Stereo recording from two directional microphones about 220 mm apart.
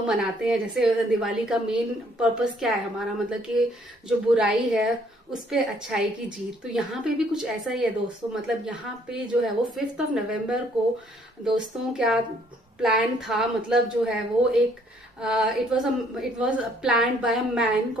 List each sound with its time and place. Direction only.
0.0 s a woman's voice: 5° right (ahead or behind)